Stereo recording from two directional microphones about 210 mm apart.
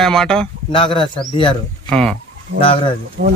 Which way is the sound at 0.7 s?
25° left (ahead or behind).